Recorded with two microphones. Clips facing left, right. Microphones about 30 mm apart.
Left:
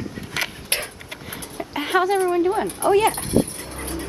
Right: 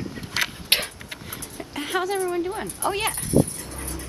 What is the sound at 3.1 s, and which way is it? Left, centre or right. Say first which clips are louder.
Vehicle: even; left.